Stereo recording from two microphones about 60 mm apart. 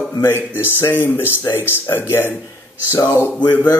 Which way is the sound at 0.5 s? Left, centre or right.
Left.